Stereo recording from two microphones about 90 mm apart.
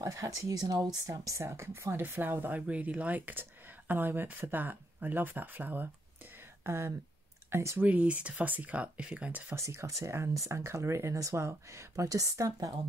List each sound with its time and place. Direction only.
0.0 s speech: 40° right (ahead or behind); by 5.9 s 20° right (ahead or behind)
6.6 s speech: 30° right (ahead or behind)
7.8 s speech: 15° right (ahead or behind)
9.6 s speech: 35° right (ahead or behind)